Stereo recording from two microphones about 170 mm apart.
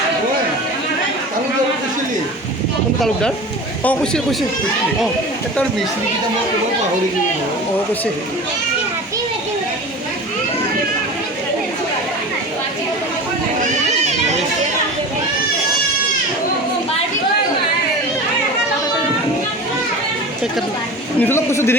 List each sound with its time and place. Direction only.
3.0 s speech: 5° left (ahead or behind)
14.0 s a sound: 40° right (ahead or behind)
21.2 s a man's voice: 15° left (ahead or behind)